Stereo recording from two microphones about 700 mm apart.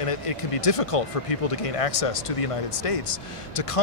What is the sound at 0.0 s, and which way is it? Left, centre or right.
Speech, left.